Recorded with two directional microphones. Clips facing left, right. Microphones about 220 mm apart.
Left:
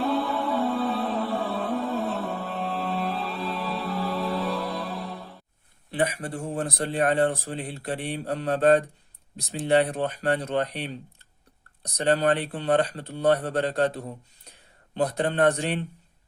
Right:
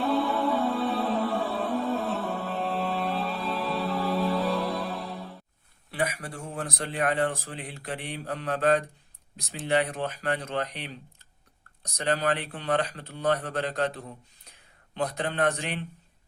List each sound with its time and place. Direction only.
0.0 s music: centre (ahead or behind)
5.9 s a man's voice: 30° left (ahead or behind)
11.9 s a man's voice: 30° left (ahead or behind)